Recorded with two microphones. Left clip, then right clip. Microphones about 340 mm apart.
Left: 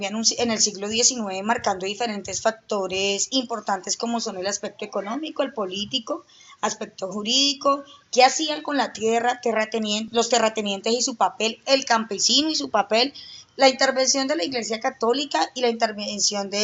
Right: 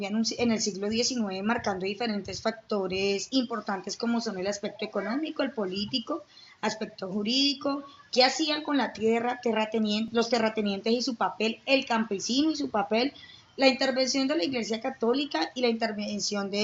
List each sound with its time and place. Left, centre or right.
0.0 s a woman's voice: left